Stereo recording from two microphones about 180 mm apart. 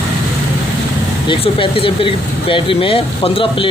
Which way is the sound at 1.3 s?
30° left (ahead or behind).